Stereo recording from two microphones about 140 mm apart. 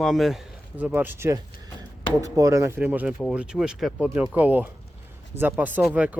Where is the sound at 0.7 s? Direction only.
15° right (ahead or behind).